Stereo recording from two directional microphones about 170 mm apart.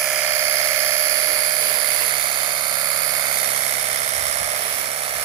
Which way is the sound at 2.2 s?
25° right (ahead or behind).